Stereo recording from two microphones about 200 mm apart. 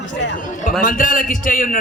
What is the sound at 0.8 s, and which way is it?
Speech, 45° left (ahead or behind).